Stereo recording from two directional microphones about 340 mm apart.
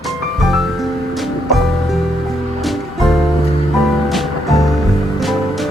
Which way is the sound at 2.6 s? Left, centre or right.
Centre.